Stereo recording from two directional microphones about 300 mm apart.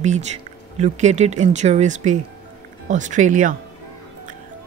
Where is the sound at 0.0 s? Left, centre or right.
Right.